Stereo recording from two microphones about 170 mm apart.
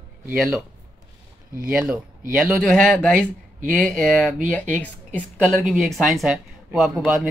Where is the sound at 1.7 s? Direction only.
5° right (ahead or behind).